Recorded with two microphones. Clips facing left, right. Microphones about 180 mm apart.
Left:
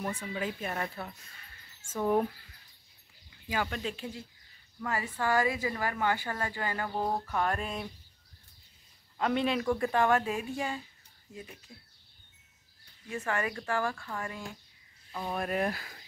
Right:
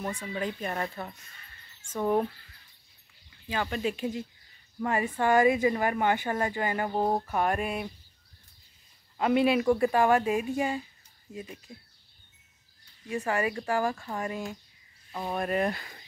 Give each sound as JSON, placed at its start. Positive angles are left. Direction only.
{"t": 0.3, "sound": "speech", "side_deg": 5}
{"t": 3.4, "sound": "speech", "side_deg": 10}
{"t": 3.7, "sound": "speech", "side_deg": -15}
{"t": 7.2, "sound": "speech", "side_deg": -15}
{"t": 9.2, "sound": "speech", "side_deg": -10}
{"t": 13.1, "sound": "speech", "side_deg": -15}
{"t": 15.3, "sound": "speech", "side_deg": 0}